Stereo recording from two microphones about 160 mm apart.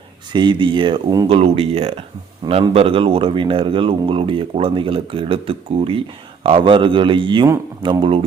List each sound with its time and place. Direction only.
0.3 s speech: 30° right (ahead or behind)
1.3 s speech: 35° right (ahead or behind)